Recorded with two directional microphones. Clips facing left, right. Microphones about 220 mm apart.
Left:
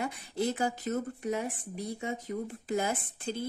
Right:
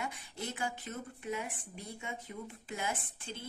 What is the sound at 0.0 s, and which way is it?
A woman's voice, 40° left (ahead or behind).